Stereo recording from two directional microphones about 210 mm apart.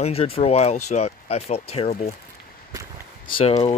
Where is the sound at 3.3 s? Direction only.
30° left (ahead or behind).